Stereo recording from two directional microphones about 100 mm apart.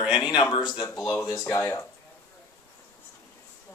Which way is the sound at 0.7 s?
30° left (ahead or behind).